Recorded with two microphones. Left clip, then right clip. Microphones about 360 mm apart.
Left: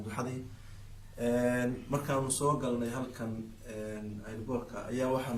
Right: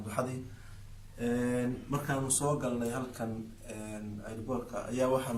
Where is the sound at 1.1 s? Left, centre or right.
Centre.